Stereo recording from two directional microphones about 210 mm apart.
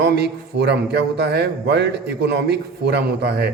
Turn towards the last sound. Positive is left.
turn(degrees=-50)  # may be behind; listen again after turning